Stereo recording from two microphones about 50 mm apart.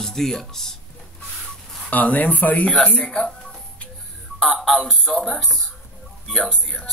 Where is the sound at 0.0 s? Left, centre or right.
Centre.